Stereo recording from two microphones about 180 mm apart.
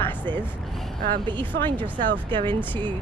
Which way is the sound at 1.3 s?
25° right (ahead or behind).